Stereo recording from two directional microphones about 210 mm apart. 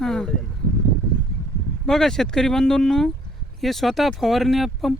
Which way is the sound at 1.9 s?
Centre (ahead or behind).